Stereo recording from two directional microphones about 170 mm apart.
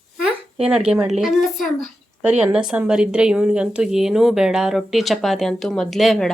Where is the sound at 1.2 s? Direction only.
Centre (ahead or behind).